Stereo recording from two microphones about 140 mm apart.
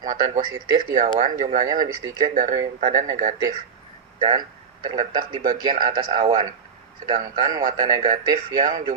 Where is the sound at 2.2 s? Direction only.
75° right (ahead or behind).